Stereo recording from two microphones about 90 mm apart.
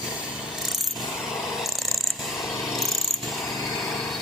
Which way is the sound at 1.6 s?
Centre (ahead or behind).